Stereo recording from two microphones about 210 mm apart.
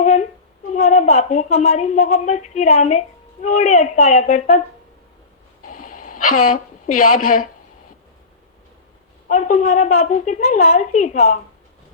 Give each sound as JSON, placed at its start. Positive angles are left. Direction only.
{"t": 0.0, "sound": "humming", "side_deg": 35}
{"t": 0.7, "sound": "a woman's voice", "side_deg": 35}
{"t": 5.6, "sound": "dog", "side_deg": 40}
{"t": 6.4, "sound": "a woman's voice", "side_deg": 40}
{"t": 9.3, "sound": "a woman's voice", "side_deg": 35}